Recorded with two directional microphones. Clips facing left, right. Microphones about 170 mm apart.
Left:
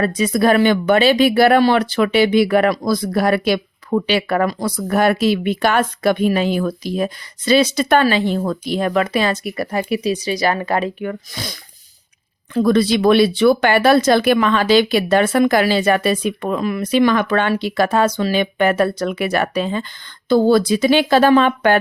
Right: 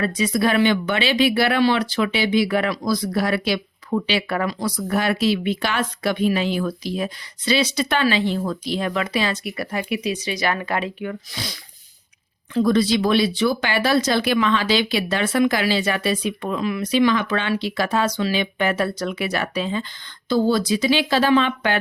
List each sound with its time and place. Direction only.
0.0 s speech: 50° left (ahead or behind)
12.5 s speech: 60° left (ahead or behind)